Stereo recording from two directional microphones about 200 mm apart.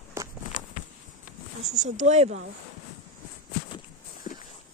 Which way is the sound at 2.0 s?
35° right (ahead or behind).